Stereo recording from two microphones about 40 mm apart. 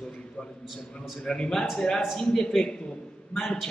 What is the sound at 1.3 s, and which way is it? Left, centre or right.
A man's voice, centre.